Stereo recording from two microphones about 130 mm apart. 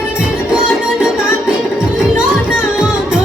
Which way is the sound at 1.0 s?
5° right (ahead or behind).